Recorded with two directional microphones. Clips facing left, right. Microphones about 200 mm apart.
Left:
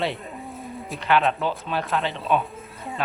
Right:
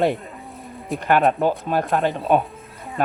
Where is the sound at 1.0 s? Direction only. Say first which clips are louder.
Right 4 dB; 50° right (ahead or behind).